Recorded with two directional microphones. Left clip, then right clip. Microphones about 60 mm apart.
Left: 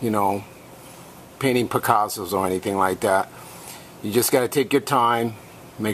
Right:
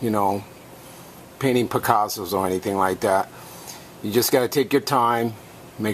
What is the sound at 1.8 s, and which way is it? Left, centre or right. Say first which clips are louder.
Speech: even; centre.